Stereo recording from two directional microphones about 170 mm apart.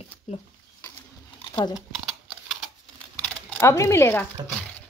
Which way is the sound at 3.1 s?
10° left (ahead or behind).